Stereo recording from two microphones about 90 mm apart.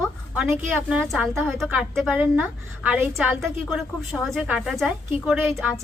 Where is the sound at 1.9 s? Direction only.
5° left (ahead or behind).